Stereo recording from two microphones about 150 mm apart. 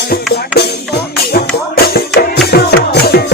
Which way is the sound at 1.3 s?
90° left.